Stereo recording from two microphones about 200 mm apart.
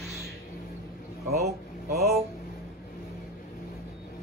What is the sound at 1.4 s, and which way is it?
Speech, 55° right (ahead or behind).